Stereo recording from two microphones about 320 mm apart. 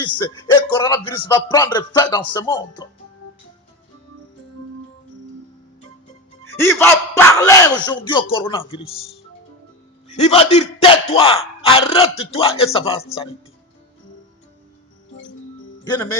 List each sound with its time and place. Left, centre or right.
0.7 s speech: centre
6.6 s speech: centre
10.2 s speech: centre
15.8 s speech: centre